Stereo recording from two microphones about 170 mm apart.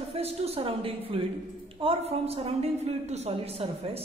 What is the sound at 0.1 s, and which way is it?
A man's voice, 35° right (ahead or behind).